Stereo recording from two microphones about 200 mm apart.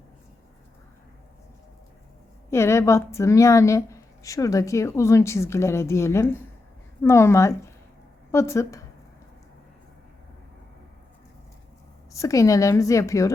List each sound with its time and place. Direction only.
2.5 s a woman's voice: 15° left (ahead or behind)
12.1 s a woman's voice: 15° left (ahead or behind)